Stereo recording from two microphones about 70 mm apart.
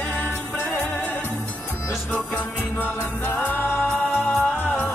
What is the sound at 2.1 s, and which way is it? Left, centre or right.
Music, left.